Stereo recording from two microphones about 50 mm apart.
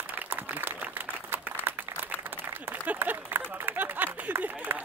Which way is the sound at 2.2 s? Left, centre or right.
Right.